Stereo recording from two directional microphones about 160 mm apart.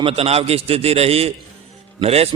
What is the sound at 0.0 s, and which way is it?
A man's voice, 40° right (ahead or behind).